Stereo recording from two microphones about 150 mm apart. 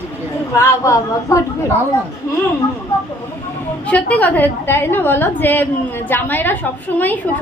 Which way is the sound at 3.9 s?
10° left (ahead or behind).